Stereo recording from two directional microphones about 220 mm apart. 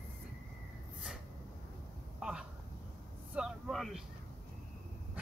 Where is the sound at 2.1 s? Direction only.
5° right (ahead or behind).